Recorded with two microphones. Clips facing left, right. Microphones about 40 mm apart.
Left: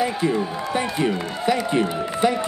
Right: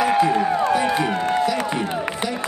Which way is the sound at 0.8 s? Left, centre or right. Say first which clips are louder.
Right 3 dB; right.